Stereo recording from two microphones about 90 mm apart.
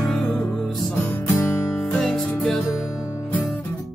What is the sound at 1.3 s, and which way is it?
Music, 30° left (ahead or behind).